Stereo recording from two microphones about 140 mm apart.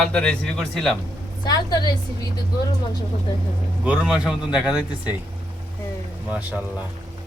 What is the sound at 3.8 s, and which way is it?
Speech, 5° right (ahead or behind).